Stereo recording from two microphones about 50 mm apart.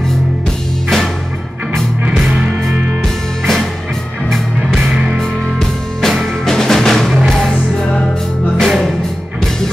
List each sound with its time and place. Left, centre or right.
0.8 s music: centre
2.3 s music: right
3.0 s music: centre
4.7 s music: centre
5.6 s music: centre
8.5 s music: centre